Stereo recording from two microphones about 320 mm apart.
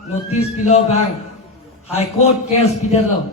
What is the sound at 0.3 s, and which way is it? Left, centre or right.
A man's voice, centre.